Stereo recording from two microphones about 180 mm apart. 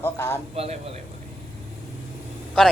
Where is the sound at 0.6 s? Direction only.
35° right (ahead or behind).